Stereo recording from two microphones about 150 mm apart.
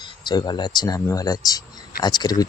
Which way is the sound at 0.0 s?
30° left (ahead or behind).